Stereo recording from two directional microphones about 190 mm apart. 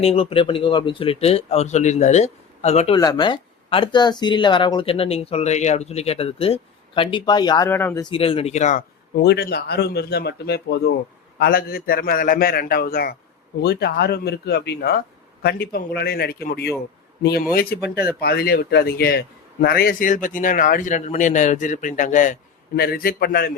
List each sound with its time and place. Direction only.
0.0 s speech: 30° left (ahead or behind)
2.9 s speech: 20° left (ahead or behind)
7.7 s speech: 10° left (ahead or behind)
8.1 s speech: 30° left (ahead or behind)
9.2 s speech: 60° left (ahead or behind)